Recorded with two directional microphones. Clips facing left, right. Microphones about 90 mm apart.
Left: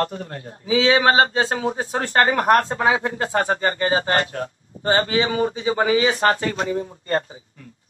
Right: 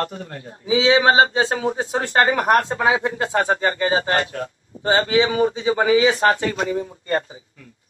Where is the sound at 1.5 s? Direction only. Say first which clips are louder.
Right 1 dB; 30° left (ahead or behind).